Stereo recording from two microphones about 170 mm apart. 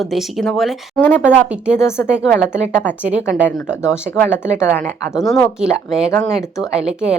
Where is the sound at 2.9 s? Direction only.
10° left (ahead or behind).